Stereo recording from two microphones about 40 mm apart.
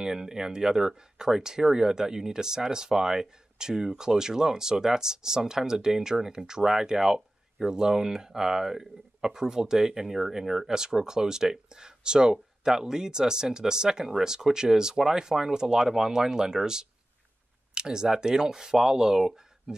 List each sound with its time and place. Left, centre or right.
0.0 s speech: centre